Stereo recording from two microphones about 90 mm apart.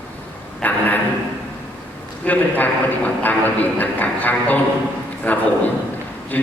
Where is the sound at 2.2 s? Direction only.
15° left (ahead or behind).